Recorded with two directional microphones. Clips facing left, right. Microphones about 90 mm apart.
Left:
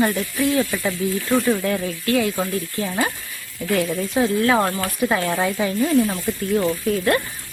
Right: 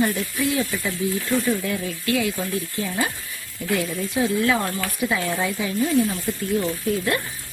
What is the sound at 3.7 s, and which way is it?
Speech, 50° left (ahead or behind).